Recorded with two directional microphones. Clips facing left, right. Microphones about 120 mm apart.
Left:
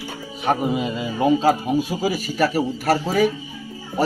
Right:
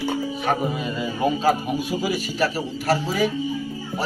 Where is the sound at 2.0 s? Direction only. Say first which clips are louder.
Left 1 dB; 45° left (ahead or behind).